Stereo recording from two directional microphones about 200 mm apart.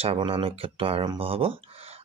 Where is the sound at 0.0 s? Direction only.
30° right (ahead or behind).